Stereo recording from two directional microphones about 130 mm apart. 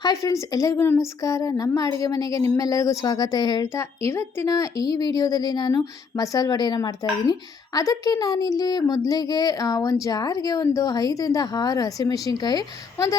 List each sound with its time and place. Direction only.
0.0 s speech: 25° left (ahead or behind)
3.7 s a woman's voice: 20° left (ahead or behind)